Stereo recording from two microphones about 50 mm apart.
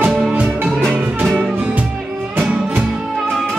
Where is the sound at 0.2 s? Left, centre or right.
Right.